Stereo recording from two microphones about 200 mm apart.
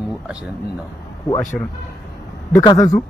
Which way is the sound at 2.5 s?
20° left (ahead or behind).